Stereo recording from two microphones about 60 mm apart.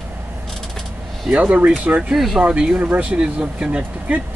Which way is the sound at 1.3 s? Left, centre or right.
Right.